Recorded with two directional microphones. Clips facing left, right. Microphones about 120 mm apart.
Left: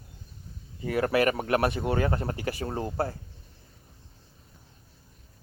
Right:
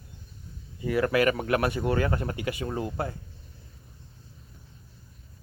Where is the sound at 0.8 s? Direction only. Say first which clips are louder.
Right 1 dB; 30° left (ahead or behind).